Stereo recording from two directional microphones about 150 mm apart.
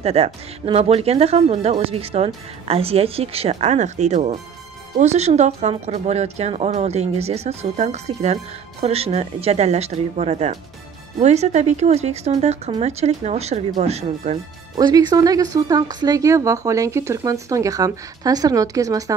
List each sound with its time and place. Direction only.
0.0 s speech: 40° right (ahead or behind)
14.8 s speech: 25° right (ahead or behind)